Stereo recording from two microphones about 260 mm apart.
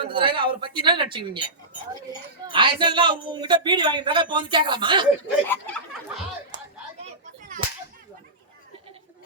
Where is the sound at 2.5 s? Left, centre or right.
Centre.